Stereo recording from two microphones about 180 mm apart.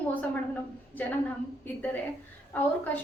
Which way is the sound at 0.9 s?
10° left (ahead or behind).